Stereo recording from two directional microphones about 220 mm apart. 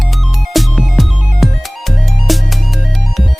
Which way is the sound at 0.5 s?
Centre (ahead or behind).